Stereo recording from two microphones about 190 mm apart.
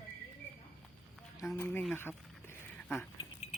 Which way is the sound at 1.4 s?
10° left (ahead or behind).